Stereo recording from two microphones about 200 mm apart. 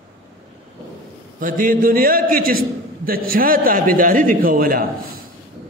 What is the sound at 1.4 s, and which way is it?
A man's voice, 45° right (ahead or behind).